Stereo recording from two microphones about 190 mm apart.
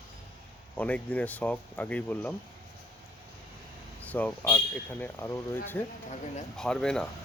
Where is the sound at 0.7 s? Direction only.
10° left (ahead or behind).